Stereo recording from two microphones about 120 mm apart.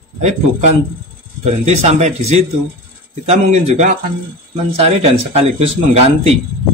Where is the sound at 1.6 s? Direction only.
70° right (ahead or behind).